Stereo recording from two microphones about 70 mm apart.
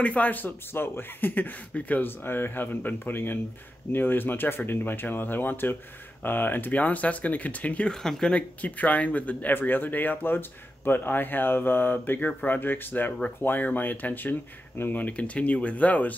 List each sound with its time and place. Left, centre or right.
0.0 s speech: centre
7.9 s speech: centre; by 16.2 s left